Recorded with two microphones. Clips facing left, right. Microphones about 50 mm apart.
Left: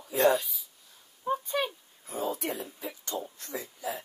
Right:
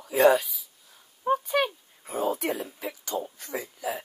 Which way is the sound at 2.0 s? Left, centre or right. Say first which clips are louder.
Right 5 dB; right.